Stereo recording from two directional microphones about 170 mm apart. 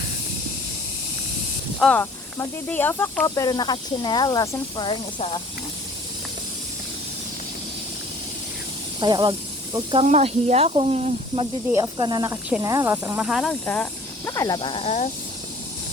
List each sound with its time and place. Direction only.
1.8 s speech: 10° left (ahead or behind); by 5.4 s 30° left (ahead or behind)
9.0 s speech: 25° right (ahead or behind)
11.7 s speech: 20° right (ahead or behind); by 13.6 s centre (ahead or behind)
14.3 s speech: 20° left (ahead or behind); by 15.1 s 40° left (ahead or behind)